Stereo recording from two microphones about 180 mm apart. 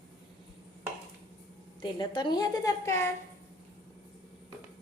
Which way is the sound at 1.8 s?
25° left (ahead or behind).